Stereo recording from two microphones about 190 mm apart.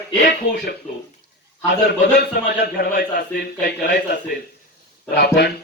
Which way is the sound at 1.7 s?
60° left (ahead or behind).